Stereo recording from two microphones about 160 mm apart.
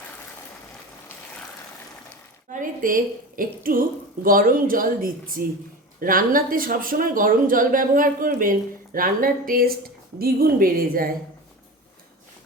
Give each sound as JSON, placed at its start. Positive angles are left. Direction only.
{"t": 2.5, "sound": "speech", "side_deg": -55}